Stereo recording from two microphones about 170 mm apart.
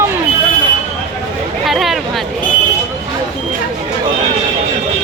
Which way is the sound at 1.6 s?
Centre (ahead or behind).